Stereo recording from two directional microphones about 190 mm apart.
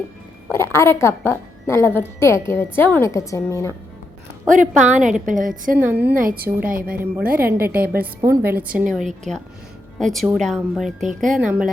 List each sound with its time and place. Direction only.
0.5 s a woman's voice: 15° left (ahead or behind)
4.4 s a woman's voice: 45° right (ahead or behind)
5.8 s a woman's voice: 10° right (ahead or behind)
6.1 s a woman's voice: 50° right (ahead or behind)
6.9 s a woman's voice: 10° right (ahead or behind)
7.4 s a woman's voice: 50° right (ahead or behind)
8.0 s a woman's voice: 15° right (ahead or behind)
11.0 s a woman's voice: 40° right (ahead or behind)